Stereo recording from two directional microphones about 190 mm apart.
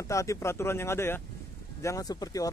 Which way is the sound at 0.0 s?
15° left (ahead or behind).